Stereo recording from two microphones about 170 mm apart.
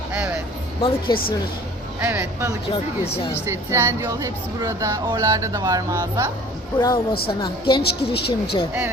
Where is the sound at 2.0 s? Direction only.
10° right (ahead or behind).